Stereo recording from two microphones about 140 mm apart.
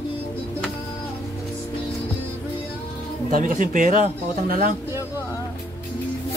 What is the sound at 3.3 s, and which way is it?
Speech, 75° right (ahead or behind).